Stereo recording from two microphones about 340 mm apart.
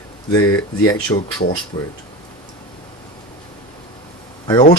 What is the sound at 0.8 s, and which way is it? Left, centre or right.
Speech, centre.